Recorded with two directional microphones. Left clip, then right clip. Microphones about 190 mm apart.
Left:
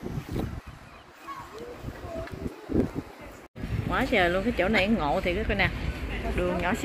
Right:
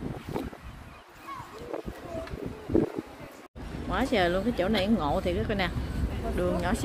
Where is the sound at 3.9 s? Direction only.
5° right (ahead or behind).